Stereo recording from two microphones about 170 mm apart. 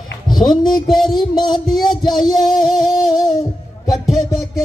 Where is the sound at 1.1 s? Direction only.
25° left (ahead or behind).